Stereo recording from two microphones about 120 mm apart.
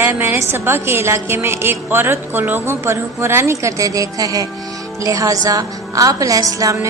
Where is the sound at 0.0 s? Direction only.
20° right (ahead or behind).